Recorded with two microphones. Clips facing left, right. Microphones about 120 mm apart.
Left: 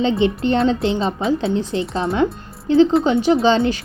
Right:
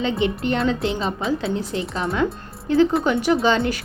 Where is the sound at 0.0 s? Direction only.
25° left (ahead or behind).